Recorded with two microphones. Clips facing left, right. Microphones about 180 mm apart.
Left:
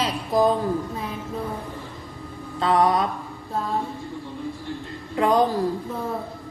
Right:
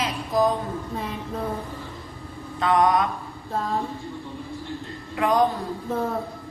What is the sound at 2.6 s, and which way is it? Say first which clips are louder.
Mantra: even; 30° left (ahead or behind).